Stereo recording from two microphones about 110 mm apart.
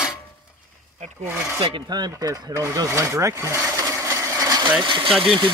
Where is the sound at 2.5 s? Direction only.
25° right (ahead or behind).